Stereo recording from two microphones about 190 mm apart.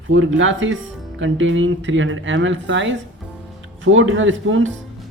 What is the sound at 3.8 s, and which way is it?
Speech, 90° right.